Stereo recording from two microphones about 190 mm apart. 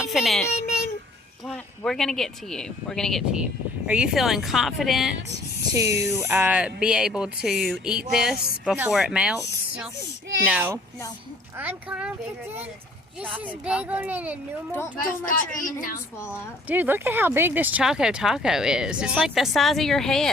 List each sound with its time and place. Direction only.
0.0 s a child's voice: centre (ahead or behind)
1.5 s speech: 5° left (ahead or behind)
5.7 s a child's voice: 15° right (ahead or behind)
13.3 s a child's voice: 5° right (ahead or behind)
14.9 s speech: 50° left (ahead or behind)
16.6 s speech: 10° right (ahead or behind)